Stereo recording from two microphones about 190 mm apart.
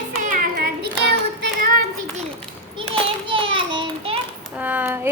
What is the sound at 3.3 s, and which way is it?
Child singing, 25° right (ahead or behind).